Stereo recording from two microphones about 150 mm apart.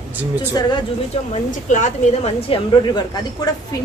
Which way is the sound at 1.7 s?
55° left (ahead or behind).